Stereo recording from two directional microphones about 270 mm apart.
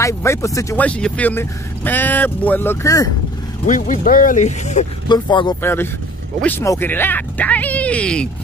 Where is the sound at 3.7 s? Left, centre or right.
Left.